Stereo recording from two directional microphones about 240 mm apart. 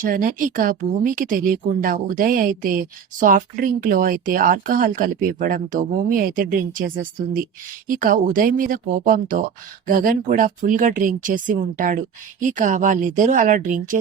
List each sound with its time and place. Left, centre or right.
0.0 s speech: right